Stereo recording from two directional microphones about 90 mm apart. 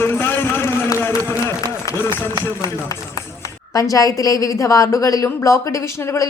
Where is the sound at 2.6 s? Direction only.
40° left (ahead or behind).